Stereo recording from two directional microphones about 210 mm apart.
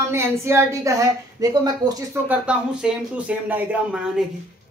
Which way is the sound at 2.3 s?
5° right (ahead or behind).